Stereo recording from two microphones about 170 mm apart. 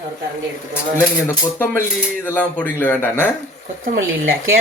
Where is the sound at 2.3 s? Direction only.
10° left (ahead or behind).